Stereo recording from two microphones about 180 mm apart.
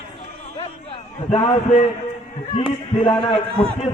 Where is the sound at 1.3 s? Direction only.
35° left (ahead or behind).